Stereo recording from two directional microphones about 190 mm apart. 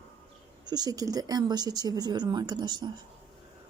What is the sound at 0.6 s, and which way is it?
Speech, 20° right (ahead or behind).